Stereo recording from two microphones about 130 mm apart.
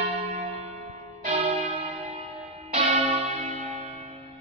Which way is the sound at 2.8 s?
60° right (ahead or behind).